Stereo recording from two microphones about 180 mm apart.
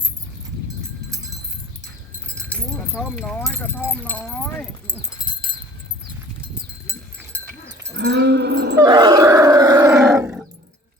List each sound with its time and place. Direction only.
2.9 s speech: 5° right (ahead or behind)
3.4 s speech: 10° left (ahead or behind)
7.9 s cattle: 70° right (ahead or behind)
8.8 s roar: 25° right (ahead or behind)